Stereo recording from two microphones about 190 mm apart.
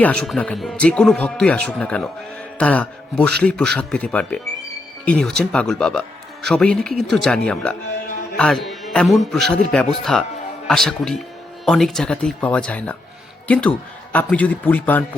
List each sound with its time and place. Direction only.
0.0 s a man's voice: 5° left (ahead or behind)